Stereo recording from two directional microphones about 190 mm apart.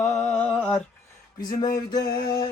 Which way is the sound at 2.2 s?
20° left (ahead or behind).